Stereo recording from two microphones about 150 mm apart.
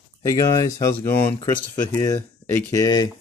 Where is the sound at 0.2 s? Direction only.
25° left (ahead or behind).